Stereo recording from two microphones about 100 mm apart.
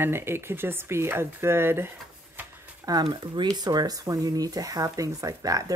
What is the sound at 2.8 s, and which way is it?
Speech, 45° right (ahead or behind).